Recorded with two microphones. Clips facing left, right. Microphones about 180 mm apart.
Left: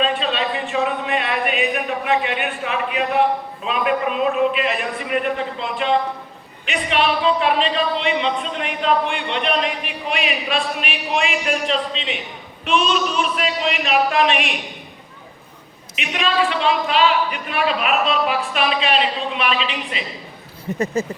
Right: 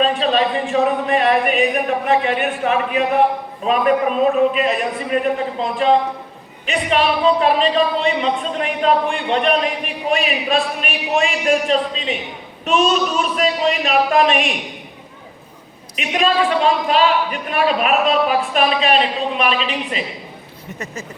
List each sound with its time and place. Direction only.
0.0 s a man's voice: 40° right (ahead or behind)
16.0 s speech: 45° right (ahead or behind)
20.7 s speech: 35° left (ahead or behind)